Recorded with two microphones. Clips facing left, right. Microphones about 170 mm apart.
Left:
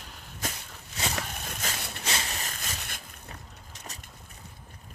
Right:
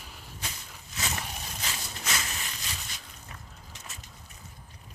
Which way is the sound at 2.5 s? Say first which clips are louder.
Left 2 dB; 55° left (ahead or behind).